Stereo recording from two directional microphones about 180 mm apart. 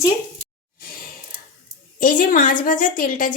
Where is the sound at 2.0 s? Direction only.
50° left (ahead or behind).